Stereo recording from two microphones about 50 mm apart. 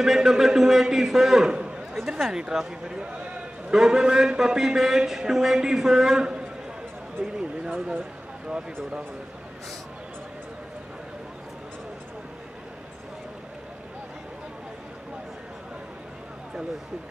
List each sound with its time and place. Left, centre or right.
0.0 s a man's voice: centre
3.7 s a man's voice: centre